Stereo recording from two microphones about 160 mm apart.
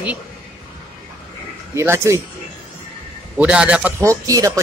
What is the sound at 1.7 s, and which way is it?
Speech, 15° right (ahead or behind).